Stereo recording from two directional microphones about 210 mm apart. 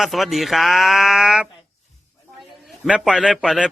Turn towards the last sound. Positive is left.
turn(degrees=-5)  # may be behind; listen again after turning